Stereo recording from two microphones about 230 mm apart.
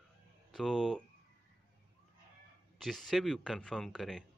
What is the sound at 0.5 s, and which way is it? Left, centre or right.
Speech, centre.